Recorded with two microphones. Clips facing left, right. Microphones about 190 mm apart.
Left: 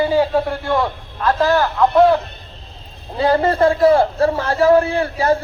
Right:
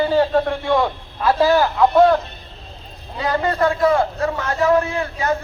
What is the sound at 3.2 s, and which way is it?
A man's voice, 30° left (ahead or behind).